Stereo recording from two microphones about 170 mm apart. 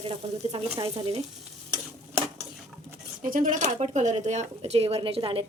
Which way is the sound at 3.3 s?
50° right (ahead or behind).